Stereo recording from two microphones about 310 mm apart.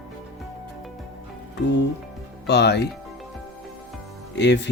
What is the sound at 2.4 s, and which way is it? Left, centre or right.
Speech, left.